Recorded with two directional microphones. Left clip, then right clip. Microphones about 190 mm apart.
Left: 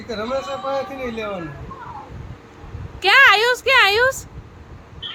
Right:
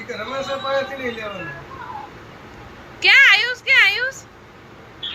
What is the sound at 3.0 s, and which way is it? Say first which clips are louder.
A woman's voice: even; 40° left (ahead or behind).